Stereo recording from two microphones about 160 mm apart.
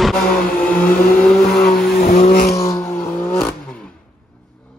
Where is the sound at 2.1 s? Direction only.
60° left (ahead or behind).